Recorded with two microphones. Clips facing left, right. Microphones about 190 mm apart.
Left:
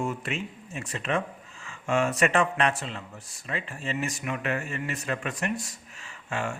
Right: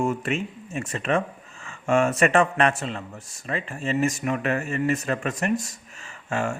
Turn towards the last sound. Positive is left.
turn(degrees=-45)  # may be behind; listen again after turning